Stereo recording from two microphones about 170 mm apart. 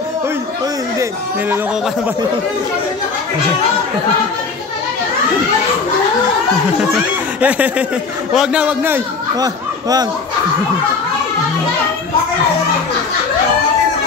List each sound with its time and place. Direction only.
7.4 s a man's voice: 10° right (ahead or behind)
9.4 s speech: 25° right (ahead or behind)